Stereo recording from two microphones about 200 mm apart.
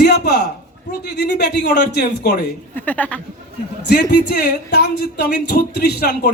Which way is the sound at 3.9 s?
55° left (ahead or behind).